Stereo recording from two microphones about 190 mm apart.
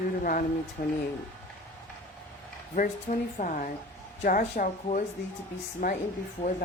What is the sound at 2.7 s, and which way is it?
A woman's voice, 45° left (ahead or behind).